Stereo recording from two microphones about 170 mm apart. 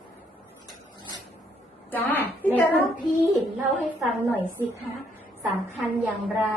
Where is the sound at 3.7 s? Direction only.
Centre (ahead or behind).